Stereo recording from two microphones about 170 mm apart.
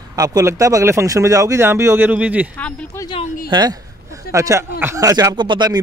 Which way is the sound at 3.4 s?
25° right (ahead or behind).